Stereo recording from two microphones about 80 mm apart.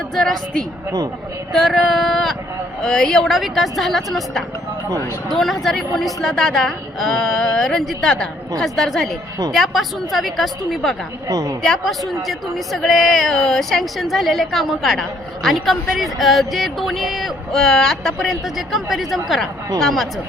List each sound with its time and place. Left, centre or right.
0.1 s speech: centre
1.5 s speech: centre
11.3 s a woman's voice: right
11.6 s speech: centre